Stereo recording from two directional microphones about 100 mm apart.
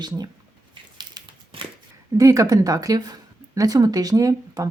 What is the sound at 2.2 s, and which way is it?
Speech, 35° right (ahead or behind).